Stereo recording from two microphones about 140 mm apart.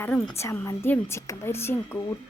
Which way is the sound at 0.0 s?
15° left (ahead or behind).